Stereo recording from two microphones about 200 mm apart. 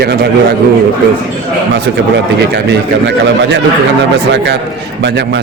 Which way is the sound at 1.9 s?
65° right (ahead or behind).